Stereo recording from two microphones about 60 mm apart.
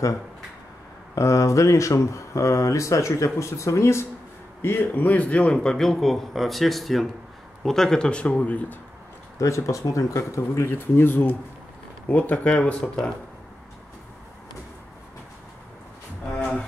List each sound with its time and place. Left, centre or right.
1.1 s a man's voice: left
9.4 s speech: left
12.1 s speech: left
16.3 s a sound: centre